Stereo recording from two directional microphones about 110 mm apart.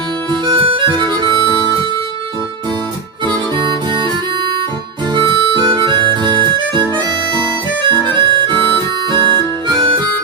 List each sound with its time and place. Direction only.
0.3 s harmonica: 45° right (ahead or behind)
3.2 s music: 45° right (ahead or behind)
5.1 s harmonica: 45° right (ahead or behind)